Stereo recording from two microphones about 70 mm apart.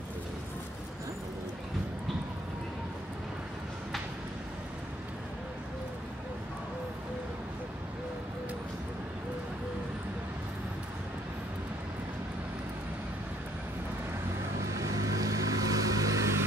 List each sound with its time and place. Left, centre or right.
14.8 s vehicle: right